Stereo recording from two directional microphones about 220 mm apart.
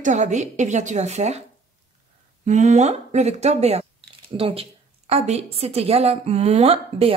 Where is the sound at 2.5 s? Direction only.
30° right (ahead or behind).